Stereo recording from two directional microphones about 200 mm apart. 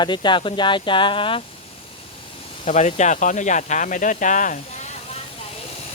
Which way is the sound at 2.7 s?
35° left (ahead or behind).